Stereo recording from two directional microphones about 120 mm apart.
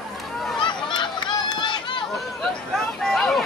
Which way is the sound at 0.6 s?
40° left (ahead or behind).